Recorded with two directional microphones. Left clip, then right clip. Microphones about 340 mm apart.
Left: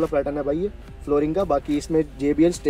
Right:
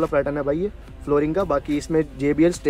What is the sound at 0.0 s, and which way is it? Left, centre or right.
Speech, centre.